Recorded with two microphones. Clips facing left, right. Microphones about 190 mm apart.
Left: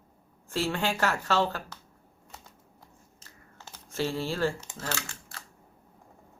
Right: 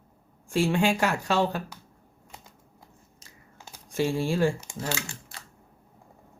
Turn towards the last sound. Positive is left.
turn(degrees=-15)  # may be behind; listen again after turning